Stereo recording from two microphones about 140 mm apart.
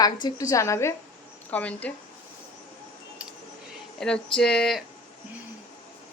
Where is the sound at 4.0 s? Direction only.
5° left (ahead or behind).